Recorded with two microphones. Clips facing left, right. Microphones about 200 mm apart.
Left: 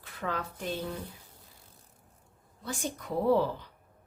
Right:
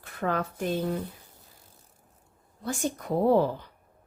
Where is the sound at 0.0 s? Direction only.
50° right (ahead or behind).